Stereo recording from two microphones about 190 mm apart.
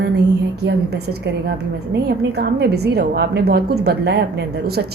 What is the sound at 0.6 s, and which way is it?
A woman's voice, 60° right (ahead or behind).